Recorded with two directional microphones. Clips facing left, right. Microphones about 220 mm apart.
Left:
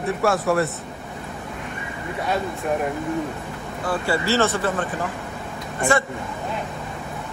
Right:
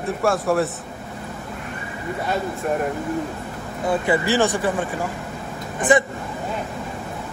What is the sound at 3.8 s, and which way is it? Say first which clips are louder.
Speech: right 3 dB; 15° right (ahead or behind).